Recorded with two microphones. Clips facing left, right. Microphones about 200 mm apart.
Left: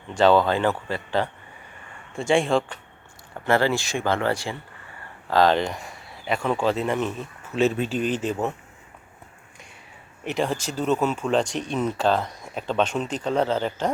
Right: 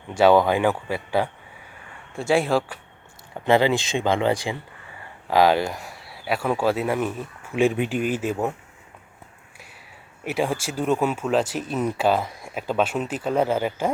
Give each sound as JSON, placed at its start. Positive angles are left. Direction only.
{"t": 0.1, "sound": "speech", "side_deg": -10}
{"t": 3.4, "sound": "speech", "side_deg": -15}
{"t": 10.2, "sound": "speech", "side_deg": -10}